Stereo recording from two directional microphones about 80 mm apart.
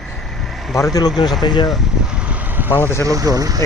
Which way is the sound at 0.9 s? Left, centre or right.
Left.